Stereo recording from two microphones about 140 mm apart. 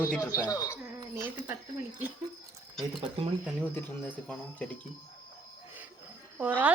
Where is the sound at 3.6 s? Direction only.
15° left (ahead or behind).